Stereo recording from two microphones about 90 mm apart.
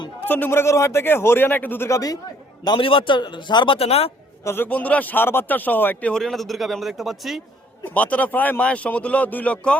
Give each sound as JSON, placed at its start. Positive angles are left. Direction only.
{"t": 0.3, "sound": "speech", "side_deg": 20}
{"t": 1.9, "sound": "a man's voice", "side_deg": 40}
{"t": 2.6, "sound": "a man's voice", "side_deg": 75}
{"t": 4.4, "sound": "speech", "side_deg": 25}
{"t": 6.1, "sound": "speech", "side_deg": 5}
{"t": 7.9, "sound": "a man's voice", "side_deg": 15}